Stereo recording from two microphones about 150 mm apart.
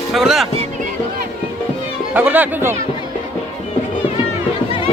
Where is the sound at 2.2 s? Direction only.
10° right (ahead or behind).